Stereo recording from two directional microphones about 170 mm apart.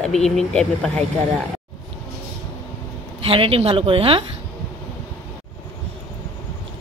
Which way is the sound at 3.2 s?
35° right (ahead or behind).